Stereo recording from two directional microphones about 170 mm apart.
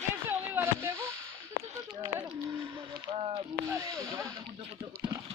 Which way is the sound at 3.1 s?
35° right (ahead or behind).